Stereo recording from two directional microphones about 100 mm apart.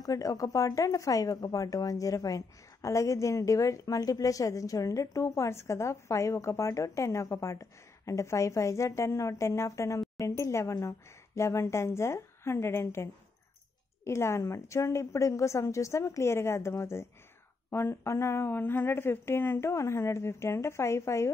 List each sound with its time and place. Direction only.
0.0 s speech: 35° left (ahead or behind)